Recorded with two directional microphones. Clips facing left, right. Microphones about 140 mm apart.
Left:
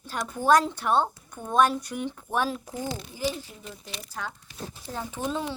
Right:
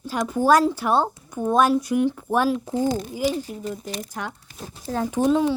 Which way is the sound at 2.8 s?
45° right (ahead or behind).